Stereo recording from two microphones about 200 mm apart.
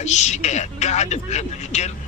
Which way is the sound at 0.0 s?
35° left (ahead or behind).